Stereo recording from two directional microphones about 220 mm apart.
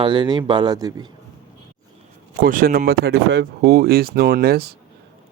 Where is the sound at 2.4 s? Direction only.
40° right (ahead or behind).